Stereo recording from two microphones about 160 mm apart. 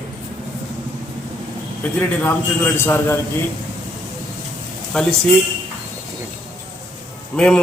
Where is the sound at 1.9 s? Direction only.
10° left (ahead or behind).